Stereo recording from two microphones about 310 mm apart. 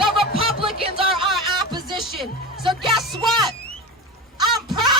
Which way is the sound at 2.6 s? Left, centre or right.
Centre.